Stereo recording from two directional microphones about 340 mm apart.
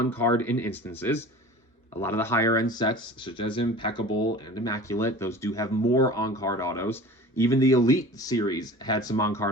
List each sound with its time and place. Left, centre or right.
0.0 s speech: centre